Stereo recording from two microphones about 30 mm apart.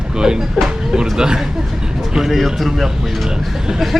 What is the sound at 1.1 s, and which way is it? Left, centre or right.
Speech, right.